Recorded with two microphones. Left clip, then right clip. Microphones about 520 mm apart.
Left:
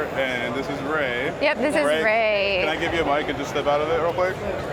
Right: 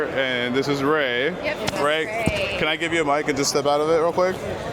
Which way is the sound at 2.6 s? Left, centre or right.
Right.